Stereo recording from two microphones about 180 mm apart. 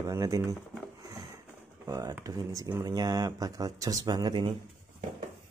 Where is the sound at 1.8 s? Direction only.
20° right (ahead or behind).